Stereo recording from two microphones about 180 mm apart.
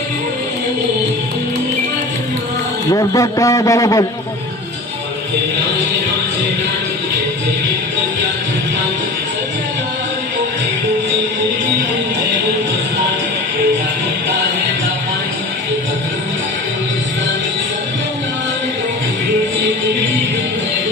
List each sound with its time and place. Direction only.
2.9 s a man's voice: 20° left (ahead or behind)